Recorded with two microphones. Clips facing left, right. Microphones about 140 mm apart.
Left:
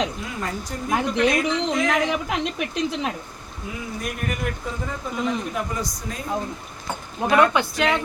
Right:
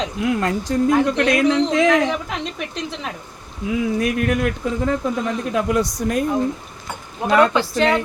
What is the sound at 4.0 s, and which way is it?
Speech, 90° right.